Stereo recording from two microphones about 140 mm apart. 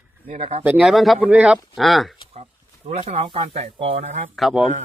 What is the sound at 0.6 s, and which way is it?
Speech, 5° right (ahead or behind).